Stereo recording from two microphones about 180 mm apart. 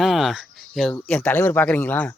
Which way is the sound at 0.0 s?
Centre (ahead or behind).